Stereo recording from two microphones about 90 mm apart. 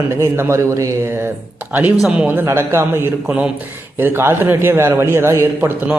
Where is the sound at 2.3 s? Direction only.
30° right (ahead or behind).